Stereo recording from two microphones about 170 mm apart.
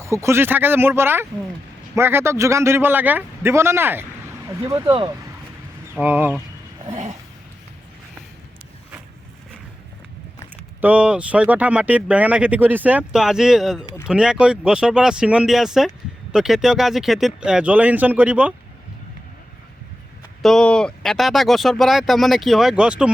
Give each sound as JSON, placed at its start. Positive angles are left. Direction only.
{"t": 0.0, "sound": "speech", "side_deg": -15}
{"t": 5.9, "sound": "speech", "side_deg": -10}
{"t": 10.8, "sound": "speech", "side_deg": -10}
{"t": 20.4, "sound": "speech", "side_deg": 5}